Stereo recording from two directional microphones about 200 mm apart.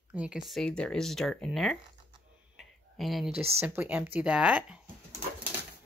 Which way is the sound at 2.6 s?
Centre (ahead or behind).